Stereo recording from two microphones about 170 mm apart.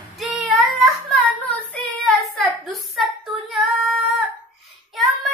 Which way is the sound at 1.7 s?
Centre (ahead or behind).